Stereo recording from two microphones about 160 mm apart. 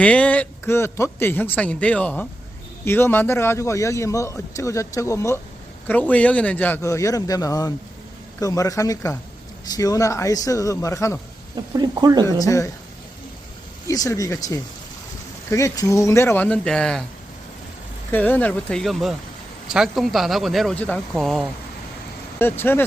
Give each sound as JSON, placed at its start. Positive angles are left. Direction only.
{"t": 0.0, "sound": "a man's voice", "side_deg": 10}
{"t": 11.5, "sound": "speech", "side_deg": -25}
{"t": 12.4, "sound": "a man's voice", "side_deg": 20}
{"t": 13.8, "sound": "a man's voice", "side_deg": 20}
{"t": 18.1, "sound": "a man's voice", "side_deg": 10}
{"t": 22.4, "sound": "a man's voice", "side_deg": 15}